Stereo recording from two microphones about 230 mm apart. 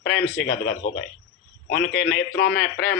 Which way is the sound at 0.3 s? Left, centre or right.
Left.